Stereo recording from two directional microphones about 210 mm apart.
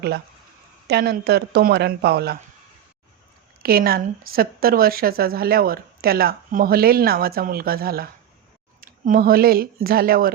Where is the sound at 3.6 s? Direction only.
45° right (ahead or behind).